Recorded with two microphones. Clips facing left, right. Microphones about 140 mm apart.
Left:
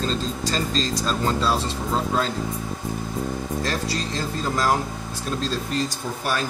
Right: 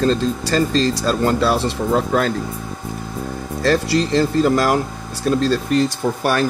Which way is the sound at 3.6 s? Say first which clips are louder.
Right 14 dB; 70° right (ahead or behind).